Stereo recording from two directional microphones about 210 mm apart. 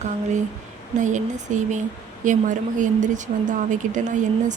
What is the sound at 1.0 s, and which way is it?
A woman's voice, 35° right (ahead or behind).